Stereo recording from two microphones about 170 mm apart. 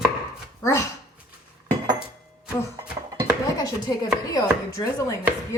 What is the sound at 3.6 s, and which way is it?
Chopping, 25° left (ahead or behind).